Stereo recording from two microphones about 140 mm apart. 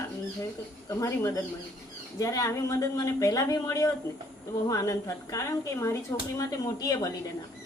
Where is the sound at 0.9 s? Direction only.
20° left (ahead or behind).